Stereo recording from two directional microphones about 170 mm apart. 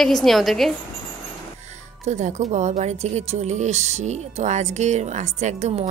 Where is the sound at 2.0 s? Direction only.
45° right (ahead or behind).